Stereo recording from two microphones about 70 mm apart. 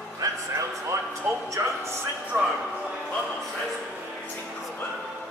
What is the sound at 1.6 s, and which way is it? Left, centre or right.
Speech, right.